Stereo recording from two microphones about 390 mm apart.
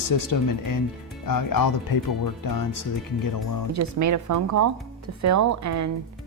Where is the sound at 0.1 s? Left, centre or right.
Left.